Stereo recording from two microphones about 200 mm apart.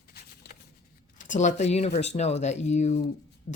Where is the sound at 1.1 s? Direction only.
40° left (ahead or behind).